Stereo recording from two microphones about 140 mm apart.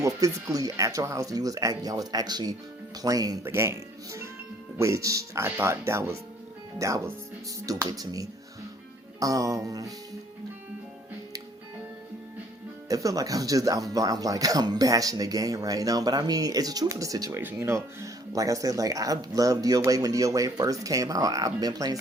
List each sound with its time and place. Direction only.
0.0 s speech: 25° right (ahead or behind)
12.9 s speech: 25° right (ahead or behind)